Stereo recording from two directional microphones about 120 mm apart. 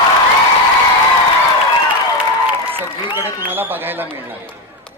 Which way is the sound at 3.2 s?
15° right (ahead or behind).